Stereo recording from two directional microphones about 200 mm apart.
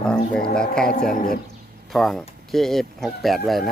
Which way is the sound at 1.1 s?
45° left (ahead or behind).